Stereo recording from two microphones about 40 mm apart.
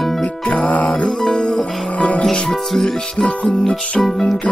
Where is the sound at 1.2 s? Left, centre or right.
Centre.